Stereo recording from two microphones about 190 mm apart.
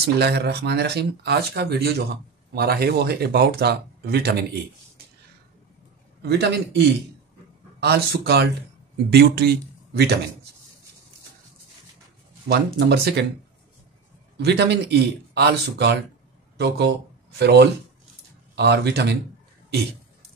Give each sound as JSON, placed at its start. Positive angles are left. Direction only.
{"t": 0.0, "sound": "speech", "side_deg": -60}
{"t": 6.2, "sound": "speech", "side_deg": -60}
{"t": 7.8, "sound": "speech", "side_deg": -60}
{"t": 12.4, "sound": "speech", "side_deg": -60}
{"t": 14.3, "sound": "speech", "side_deg": -65}